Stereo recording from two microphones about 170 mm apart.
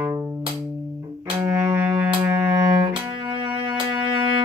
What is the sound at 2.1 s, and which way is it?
Cello, 25° right (ahead or behind).